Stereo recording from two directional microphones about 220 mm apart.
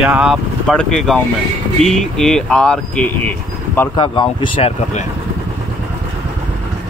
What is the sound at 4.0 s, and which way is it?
Speech, 20° left (ahead or behind).